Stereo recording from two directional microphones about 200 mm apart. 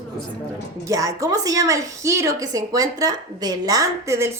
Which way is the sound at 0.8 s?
15° right (ahead or behind).